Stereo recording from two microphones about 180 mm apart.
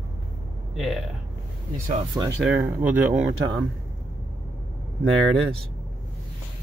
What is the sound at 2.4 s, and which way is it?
Speech, 10° right (ahead or behind).